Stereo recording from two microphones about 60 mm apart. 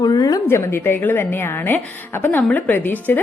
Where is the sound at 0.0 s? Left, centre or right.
Left.